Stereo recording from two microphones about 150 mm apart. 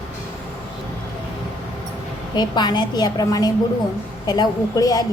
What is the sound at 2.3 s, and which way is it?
A woman's voice, 30° left (ahead or behind).